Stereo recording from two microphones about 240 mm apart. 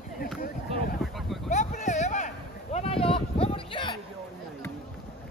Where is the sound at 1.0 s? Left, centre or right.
Centre.